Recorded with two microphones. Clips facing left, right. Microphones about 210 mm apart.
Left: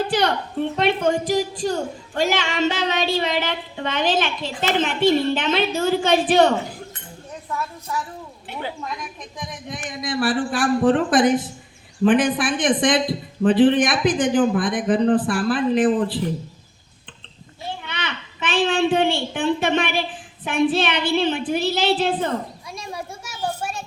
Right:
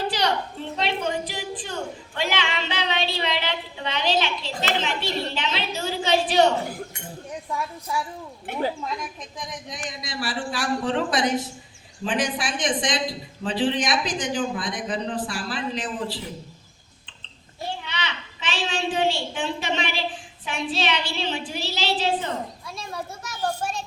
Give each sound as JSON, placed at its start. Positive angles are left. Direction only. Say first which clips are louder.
{"t": 0.1, "sound": "a woman's voice", "louder": "left 4 dB", "side_deg": 55}
{"t": 7.5, "sound": "a woman's voice", "louder": "left 1 dB", "side_deg": -10}
{"t": 8.5, "sound": "a woman's voice", "louder": "right 4 dB", "side_deg": -50}
{"t": 9.5, "sound": "a woman's voice", "louder": "left 3 dB", "side_deg": 55}
{"t": 17.8, "sound": "a woman's voice", "louder": "left 2 dB", "side_deg": 55}
{"t": 22.7, "sound": "children playing", "louder": "left 5 dB", "side_deg": 15}